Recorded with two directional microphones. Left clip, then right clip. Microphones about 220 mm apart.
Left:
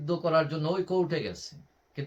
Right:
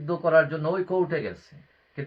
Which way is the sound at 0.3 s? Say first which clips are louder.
Right 6 dB; 20° left (ahead or behind).